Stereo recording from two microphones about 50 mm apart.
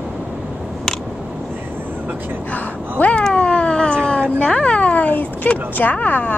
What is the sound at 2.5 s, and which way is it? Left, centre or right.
Speech, left.